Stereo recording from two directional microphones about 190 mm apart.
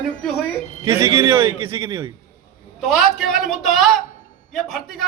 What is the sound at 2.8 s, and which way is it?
A man's voice, centre (ahead or behind).